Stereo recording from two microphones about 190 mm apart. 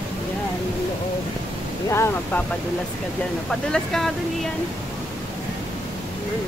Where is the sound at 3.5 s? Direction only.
5° left (ahead or behind).